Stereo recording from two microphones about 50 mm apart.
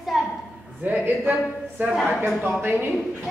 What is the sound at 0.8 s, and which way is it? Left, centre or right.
Speech, right.